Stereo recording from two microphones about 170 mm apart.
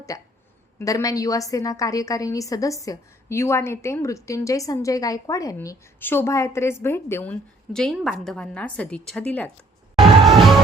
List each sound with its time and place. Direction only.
0.1 s a woman's voice: 20° left (ahead or behind)
10.2 s music: centre (ahead or behind)